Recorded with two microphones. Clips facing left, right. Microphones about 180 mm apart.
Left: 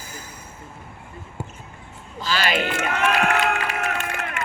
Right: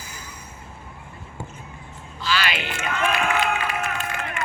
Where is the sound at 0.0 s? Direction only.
50° left (ahead or behind).